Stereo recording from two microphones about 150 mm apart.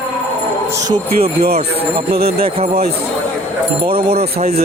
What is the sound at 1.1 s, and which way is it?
Speech, 90° right.